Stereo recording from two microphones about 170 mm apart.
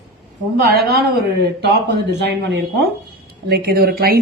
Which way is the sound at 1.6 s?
85° right.